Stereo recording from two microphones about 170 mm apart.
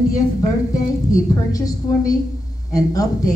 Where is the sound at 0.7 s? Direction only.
20° left (ahead or behind).